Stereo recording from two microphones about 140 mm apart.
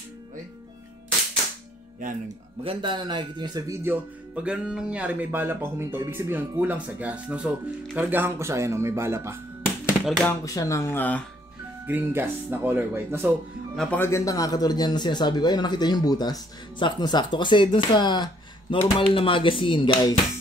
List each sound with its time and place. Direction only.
2.0 s speech: 70° right (ahead or behind)
2.6 s speech: 40° right (ahead or behind)
3.8 s speech: 10° right (ahead or behind)
10.0 s speech: 5° left (ahead or behind)
10.4 s speech: 25° left (ahead or behind)
11.8 s speech: 15° right (ahead or behind)
13.7 s a man's voice: 10° left (ahead or behind); by 20.2 s 35° left (ahead or behind)